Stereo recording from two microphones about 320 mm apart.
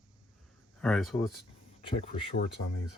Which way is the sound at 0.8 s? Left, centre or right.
Centre.